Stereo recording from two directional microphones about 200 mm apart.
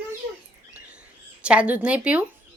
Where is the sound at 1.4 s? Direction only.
5° right (ahead or behind).